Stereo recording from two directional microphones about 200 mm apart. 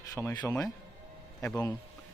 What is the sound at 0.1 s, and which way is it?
Speech, 15° left (ahead or behind).